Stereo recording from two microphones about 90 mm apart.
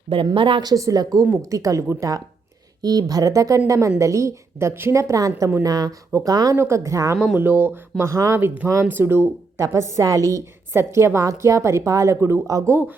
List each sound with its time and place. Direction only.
0.3 s a woman's voice: 75° right (ahead or behind)
0.6 s a woman's voice: 45° right (ahead or behind)
6.6 s a woman's voice: 35° right (ahead or behind)
7.3 s a woman's voice: 25° right (ahead or behind)